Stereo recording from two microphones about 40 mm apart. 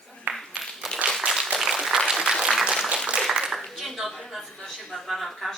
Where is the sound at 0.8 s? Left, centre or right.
Centre.